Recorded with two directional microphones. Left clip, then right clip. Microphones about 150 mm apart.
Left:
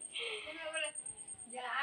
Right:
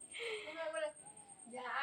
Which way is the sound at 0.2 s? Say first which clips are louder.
Left 2 dB; 10° left (ahead or behind).